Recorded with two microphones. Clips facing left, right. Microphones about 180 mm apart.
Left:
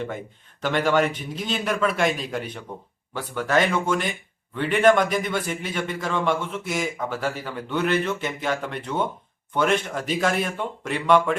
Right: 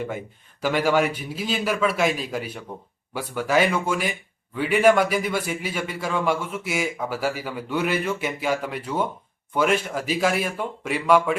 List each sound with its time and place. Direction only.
0.6 s a man's voice: 5° right (ahead or behind)